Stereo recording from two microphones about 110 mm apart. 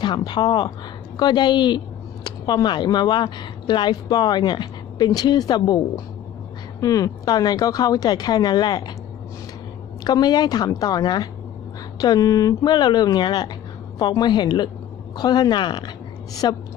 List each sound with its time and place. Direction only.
0.0 s speech: 40° left (ahead or behind)
6.8 s speech: 30° left (ahead or behind)
10.0 s speech: 40° left (ahead or behind)